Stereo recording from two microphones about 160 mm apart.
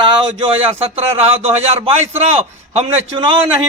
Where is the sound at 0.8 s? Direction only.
40° right (ahead or behind).